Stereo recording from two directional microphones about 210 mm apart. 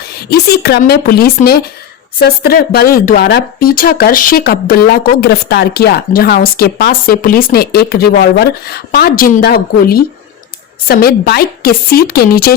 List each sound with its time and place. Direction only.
0.3 s speech: 50° left (ahead or behind)